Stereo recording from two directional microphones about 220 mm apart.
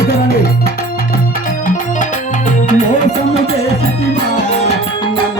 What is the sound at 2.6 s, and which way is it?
Music, 35° left (ahead or behind).